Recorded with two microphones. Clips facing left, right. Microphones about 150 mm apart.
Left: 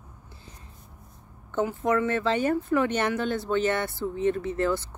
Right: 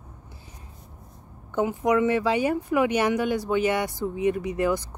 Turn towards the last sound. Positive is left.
turn(degrees=-15)  # may be behind; listen again after turning